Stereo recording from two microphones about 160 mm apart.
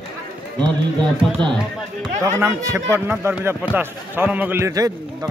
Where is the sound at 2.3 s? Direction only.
15° right (ahead or behind).